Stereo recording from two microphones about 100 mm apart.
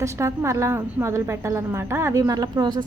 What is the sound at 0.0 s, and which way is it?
A woman's voice, 30° right (ahead or behind).